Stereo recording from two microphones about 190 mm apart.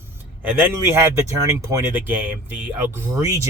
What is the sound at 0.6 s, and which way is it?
Speech, 15° right (ahead or behind).